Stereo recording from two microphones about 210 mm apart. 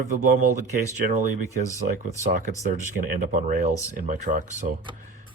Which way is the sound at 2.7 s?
40° right (ahead or behind).